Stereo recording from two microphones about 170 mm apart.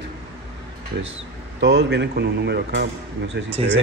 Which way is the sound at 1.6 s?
80° right.